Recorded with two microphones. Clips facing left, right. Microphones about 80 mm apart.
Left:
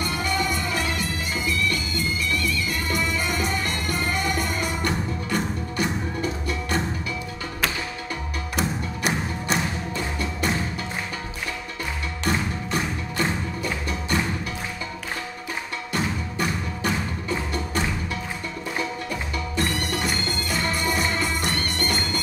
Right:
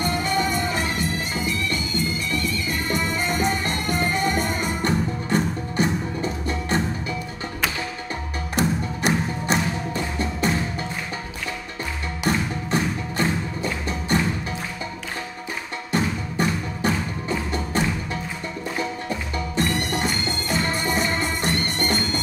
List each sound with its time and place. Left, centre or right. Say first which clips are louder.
0.0 s music: right 3 dB; right
8.5 s music: right 4 dB; centre
9.9 s music: right 2 dB; right
13.6 s music: right 1 dB; right
15.9 s music: right 4 dB; right
19.0 s music: right 2 dB; right